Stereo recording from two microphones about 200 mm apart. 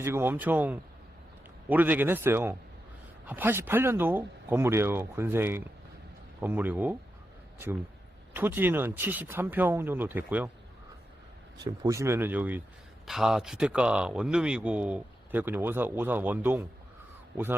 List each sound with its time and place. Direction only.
0.0 s speech: 10° right (ahead or behind)
8.4 s speech: 10° right (ahead or behind)
11.5 s speech: 20° right (ahead or behind)